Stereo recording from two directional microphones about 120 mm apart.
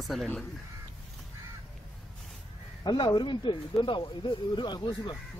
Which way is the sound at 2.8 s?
35° left (ahead or behind).